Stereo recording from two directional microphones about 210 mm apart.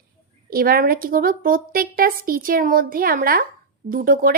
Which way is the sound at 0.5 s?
45° right (ahead or behind).